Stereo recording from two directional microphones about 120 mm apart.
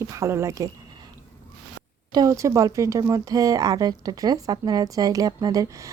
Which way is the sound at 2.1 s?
25° right (ahead or behind).